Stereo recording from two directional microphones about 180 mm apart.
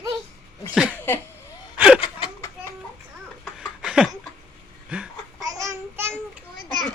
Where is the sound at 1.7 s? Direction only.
5° right (ahead or behind).